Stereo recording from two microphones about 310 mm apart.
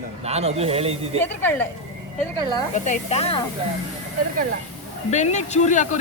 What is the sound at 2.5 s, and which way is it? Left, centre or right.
Speech, left.